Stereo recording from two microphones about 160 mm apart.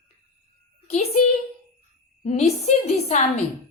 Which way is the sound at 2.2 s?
40° left (ahead or behind).